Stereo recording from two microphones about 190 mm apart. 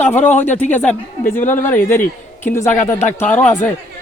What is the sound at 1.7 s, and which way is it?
Speech, 10° left (ahead or behind).